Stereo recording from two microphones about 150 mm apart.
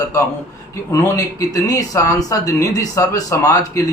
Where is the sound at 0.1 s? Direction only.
20° left (ahead or behind).